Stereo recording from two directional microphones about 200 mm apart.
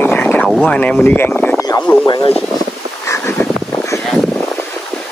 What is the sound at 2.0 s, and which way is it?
Speech, 20° left (ahead or behind).